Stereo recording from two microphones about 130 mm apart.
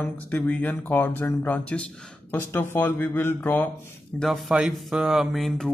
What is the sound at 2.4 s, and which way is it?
Speech, 15° left (ahead or behind).